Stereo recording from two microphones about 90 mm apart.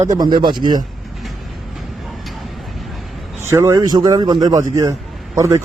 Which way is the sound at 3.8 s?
50° right (ahead or behind).